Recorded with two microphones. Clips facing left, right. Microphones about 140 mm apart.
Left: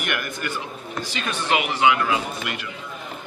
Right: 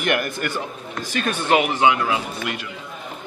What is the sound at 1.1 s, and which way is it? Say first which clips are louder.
Speech: right 5 dB; 50° right (ahead or behind).